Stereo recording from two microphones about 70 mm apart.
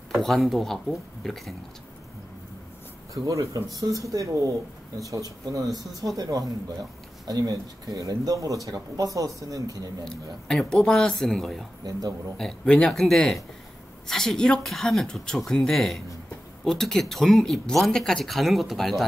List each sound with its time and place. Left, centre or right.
0.2 s speech: centre
3.3 s speech: right
7.2 s speech: right
10.0 s speech: centre
11.8 s a man's voice: right
12.4 s speech: centre